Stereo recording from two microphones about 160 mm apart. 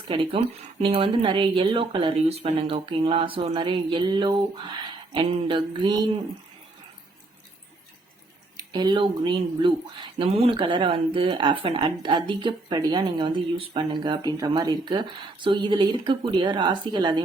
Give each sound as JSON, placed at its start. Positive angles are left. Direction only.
{"t": 0.1, "sound": "speech", "side_deg": -35}
{"t": 8.5, "sound": "speech", "side_deg": -25}